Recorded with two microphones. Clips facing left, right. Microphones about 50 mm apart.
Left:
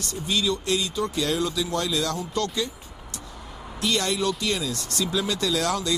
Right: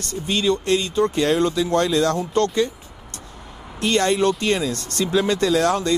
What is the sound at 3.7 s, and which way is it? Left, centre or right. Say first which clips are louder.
Speech: right 6 dB; right.